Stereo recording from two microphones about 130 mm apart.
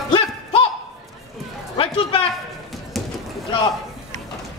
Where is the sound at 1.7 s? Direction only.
40° left (ahead or behind).